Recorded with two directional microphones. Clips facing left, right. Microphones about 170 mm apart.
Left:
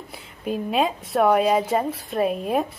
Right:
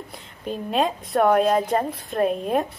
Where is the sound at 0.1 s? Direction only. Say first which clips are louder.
Left 5 dB; 5° left (ahead or behind).